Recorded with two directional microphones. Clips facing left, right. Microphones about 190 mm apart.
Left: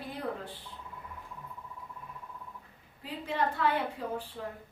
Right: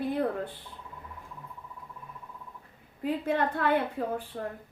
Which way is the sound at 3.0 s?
55° right (ahead or behind).